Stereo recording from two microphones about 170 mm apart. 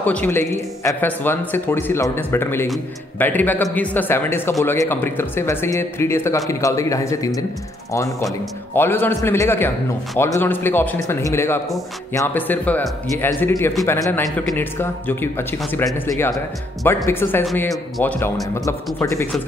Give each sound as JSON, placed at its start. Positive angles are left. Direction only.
{"t": 0.0, "sound": "a man's voice", "side_deg": 10}